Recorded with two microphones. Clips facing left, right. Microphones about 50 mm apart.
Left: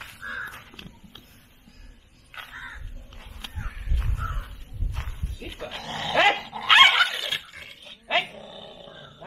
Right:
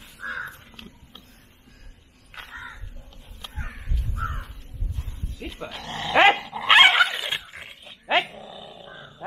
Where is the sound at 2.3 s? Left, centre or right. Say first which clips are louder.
Left 1 dB; centre.